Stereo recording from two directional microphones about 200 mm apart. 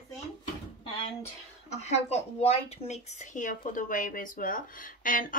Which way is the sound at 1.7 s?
35° left (ahead or behind).